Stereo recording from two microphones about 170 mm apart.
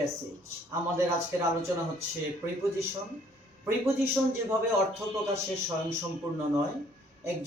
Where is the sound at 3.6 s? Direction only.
15° right (ahead or behind).